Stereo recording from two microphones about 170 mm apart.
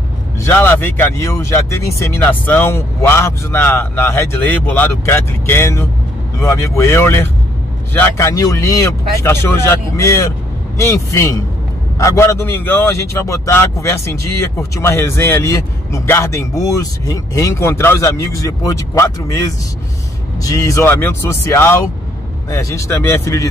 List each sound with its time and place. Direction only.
0.4 s speech: 10° left (ahead or behind)
20.4 s speech: 20° left (ahead or behind)